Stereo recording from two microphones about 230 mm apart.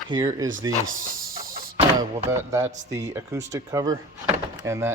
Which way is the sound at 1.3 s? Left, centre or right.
Right.